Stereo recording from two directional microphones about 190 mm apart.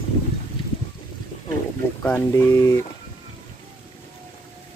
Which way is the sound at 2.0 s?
10° left (ahead or behind).